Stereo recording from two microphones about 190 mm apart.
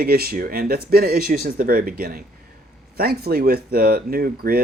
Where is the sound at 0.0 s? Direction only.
55° right (ahead or behind).